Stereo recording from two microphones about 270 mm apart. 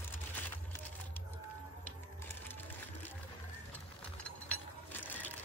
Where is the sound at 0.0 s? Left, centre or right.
Centre.